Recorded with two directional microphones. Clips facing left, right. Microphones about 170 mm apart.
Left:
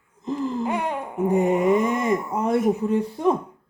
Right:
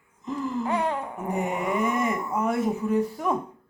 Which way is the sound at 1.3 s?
30° left (ahead or behind).